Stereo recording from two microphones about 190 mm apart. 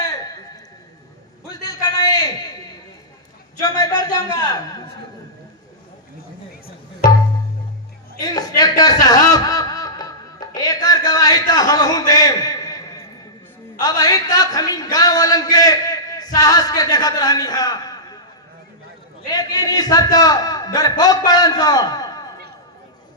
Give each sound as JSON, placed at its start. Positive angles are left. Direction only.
{"t": 1.6, "sound": "a sound", "side_deg": 20}
{"t": 3.6, "sound": "speech", "side_deg": 20}
{"t": 8.2, "sound": "chuckle", "side_deg": 20}
{"t": 13.7, "sound": "a man's voice", "side_deg": 20}
{"t": 19.3, "sound": "a man's voice", "side_deg": 20}